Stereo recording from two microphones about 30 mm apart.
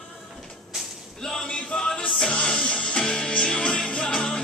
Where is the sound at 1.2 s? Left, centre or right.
Centre.